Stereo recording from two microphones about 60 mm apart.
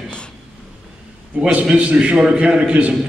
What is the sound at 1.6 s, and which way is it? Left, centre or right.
A man's voice, centre.